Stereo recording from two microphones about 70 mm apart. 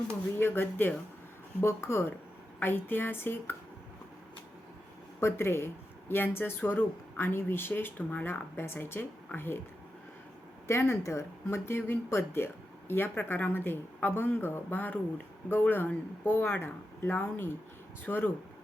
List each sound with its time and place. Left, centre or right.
0.3 s speech: left
5.2 s speech: left
10.7 s speech: left